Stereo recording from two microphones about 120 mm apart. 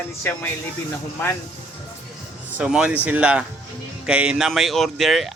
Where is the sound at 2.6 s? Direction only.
5° right (ahead or behind).